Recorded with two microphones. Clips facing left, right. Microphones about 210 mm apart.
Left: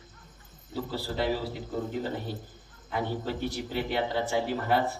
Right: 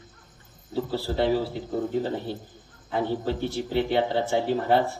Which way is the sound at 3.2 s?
25° right (ahead or behind).